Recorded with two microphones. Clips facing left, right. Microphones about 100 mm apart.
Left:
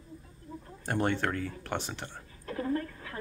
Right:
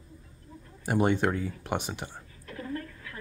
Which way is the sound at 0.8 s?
15° right (ahead or behind).